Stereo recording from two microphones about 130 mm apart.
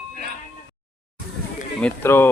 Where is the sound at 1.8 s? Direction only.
15° left (ahead or behind).